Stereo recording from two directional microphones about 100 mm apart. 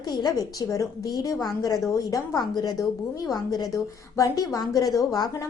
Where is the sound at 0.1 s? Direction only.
45° left (ahead or behind).